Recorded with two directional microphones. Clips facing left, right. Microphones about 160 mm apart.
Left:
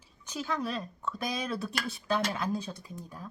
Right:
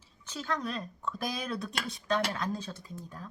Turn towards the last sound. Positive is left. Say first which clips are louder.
# even
turn(degrees=10)  # may be behind; listen again after turning